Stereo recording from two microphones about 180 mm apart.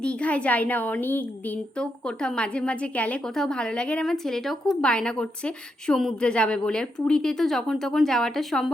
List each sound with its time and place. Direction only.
0.0 s a woman's voice: 5° left (ahead or behind)